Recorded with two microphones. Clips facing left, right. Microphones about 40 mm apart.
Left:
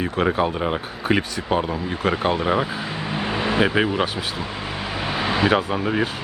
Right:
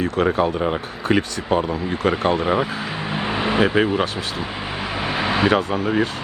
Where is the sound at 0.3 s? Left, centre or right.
Centre.